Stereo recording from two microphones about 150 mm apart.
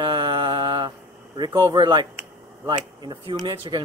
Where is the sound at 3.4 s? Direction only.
30° right (ahead or behind).